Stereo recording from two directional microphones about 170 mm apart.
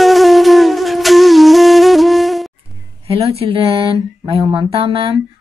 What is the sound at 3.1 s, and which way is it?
A woman's voice, 35° right (ahead or behind).